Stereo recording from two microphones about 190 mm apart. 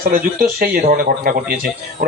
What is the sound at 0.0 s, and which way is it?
A man's voice, 50° right (ahead or behind).